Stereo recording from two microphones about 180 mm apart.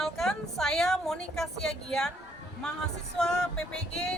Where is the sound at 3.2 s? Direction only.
5° left (ahead or behind).